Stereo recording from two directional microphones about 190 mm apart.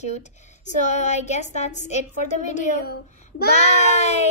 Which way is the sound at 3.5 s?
35° left (ahead or behind).